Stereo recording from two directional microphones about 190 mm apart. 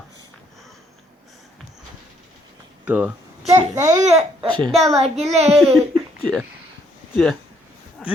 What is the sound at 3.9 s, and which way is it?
Babbling, 35° right (ahead or behind).